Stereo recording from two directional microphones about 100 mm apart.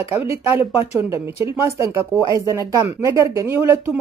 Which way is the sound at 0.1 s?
25° right (ahead or behind).